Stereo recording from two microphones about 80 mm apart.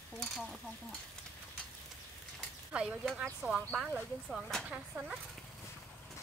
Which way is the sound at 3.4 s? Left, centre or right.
Right.